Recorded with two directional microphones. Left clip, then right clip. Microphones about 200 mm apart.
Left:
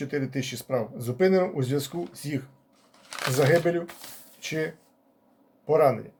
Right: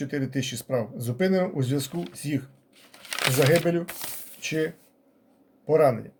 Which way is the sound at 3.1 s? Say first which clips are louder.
Right 4 dB; 45° right (ahead or behind).